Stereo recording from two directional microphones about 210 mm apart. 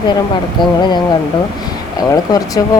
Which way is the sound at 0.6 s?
20° left (ahead or behind).